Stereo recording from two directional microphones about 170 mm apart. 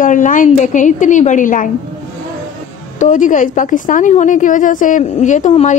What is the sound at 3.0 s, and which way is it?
A woman's voice, 50° left (ahead or behind).